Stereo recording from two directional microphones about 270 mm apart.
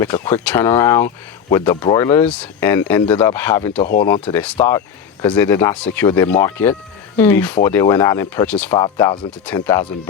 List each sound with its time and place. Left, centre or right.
0.0 s speech: centre
3.8 s speech: left
4.0 s speech: centre